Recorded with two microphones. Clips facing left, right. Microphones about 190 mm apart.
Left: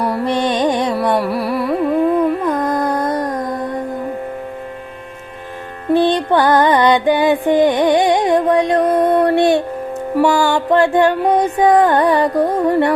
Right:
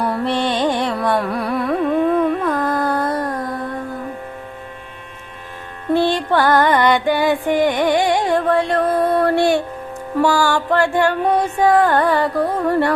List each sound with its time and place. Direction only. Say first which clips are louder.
0.3 s music: left 3 dB; 15° left (ahead or behind)
1.2 s carnatic music: left 2 dB; 5° left (ahead or behind)
2.4 s music: left 2 dB; 20° left (ahead or behind)
5.9 s music: left 3 dB; 20° left (ahead or behind)
10.2 s mantra: left 2 dB; 20° left (ahead or behind)